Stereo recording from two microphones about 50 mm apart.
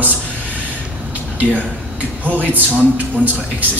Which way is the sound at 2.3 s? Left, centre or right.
Right.